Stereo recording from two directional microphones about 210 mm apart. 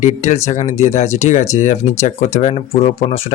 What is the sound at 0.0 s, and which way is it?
Speech, 35° left (ahead or behind).